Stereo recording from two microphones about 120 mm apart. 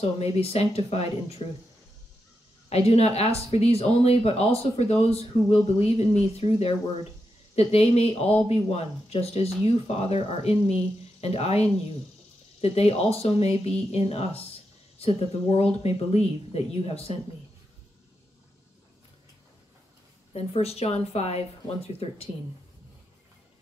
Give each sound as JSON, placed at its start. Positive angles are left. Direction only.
{"t": 0.0, "sound": "speech", "side_deg": 60}
{"t": 2.7, "sound": "speech", "side_deg": 60}
{"t": 20.3, "sound": "speech", "side_deg": 60}